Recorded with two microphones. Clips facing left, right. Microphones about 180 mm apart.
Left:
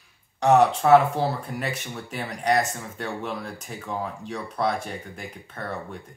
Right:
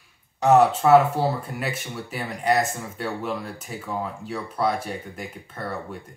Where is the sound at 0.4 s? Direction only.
5° right (ahead or behind).